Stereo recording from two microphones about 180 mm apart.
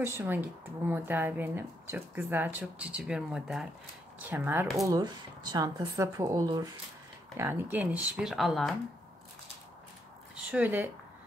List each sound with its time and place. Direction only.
0.0 s speech: 10° right (ahead or behind)
4.8 s speech: 20° right (ahead or behind); by 8.7 s centre (ahead or behind)
10.3 s speech: 5° right (ahead or behind)